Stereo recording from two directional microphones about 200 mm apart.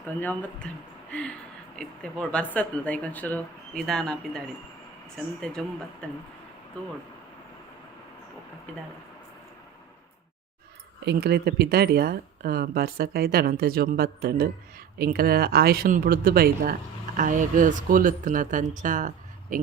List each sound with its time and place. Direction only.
0.2 s speech: 10° left (ahead or behind)
1.7 s speech: 5° left (ahead or behind)
11.0 s speech: 55° right (ahead or behind); by 19.5 s 40° right (ahead or behind)